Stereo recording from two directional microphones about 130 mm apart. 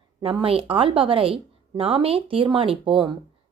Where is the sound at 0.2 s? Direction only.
45° right (ahead or behind).